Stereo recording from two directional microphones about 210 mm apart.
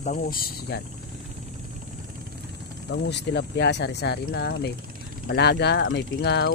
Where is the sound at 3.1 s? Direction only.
55° left (ahead or behind).